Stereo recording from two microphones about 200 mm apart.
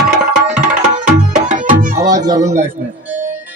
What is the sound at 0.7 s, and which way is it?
Tabla, 40° right (ahead or behind).